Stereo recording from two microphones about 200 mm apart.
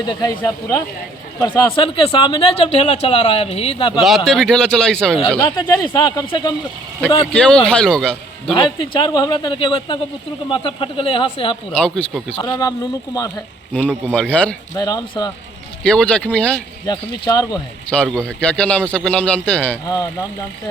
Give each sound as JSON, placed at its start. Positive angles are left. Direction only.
{"t": 0.1, "sound": "a man's voice", "side_deg": 20}
{"t": 4.0, "sound": "a man's voice", "side_deg": 0}
{"t": 5.4, "sound": "speech", "side_deg": 25}
{"t": 7.3, "sound": "a man's voice", "side_deg": 5}
{"t": 8.5, "sound": "speech", "side_deg": 25}
{"t": 11.7, "sound": "a man's voice", "side_deg": 5}
{"t": 12.4, "sound": "speech", "side_deg": 20}
{"t": 13.7, "sound": "a man's voice", "side_deg": 5}
{"t": 14.8, "sound": "speech", "side_deg": 20}
{"t": 15.8, "sound": "a man's voice", "side_deg": 5}
{"t": 16.8, "sound": "speech", "side_deg": 20}
{"t": 17.9, "sound": "a man's voice", "side_deg": 5}